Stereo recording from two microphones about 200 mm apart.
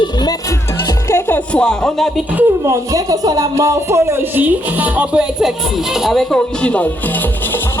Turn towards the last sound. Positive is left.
turn(degrees=5)  # may be behind; listen again after turning